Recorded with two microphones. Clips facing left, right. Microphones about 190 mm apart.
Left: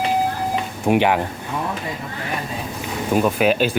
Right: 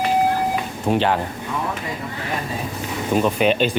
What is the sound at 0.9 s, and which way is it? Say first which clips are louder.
Speech: left 2 dB; 15° left (ahead or behind).